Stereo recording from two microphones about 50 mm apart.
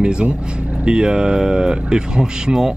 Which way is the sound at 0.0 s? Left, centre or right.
Centre.